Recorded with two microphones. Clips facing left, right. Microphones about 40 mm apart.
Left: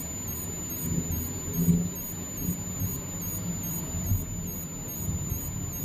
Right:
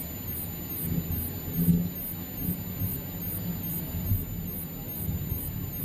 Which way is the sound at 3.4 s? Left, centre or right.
Centre.